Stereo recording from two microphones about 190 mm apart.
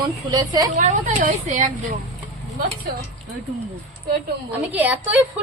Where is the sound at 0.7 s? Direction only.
40° right (ahead or behind).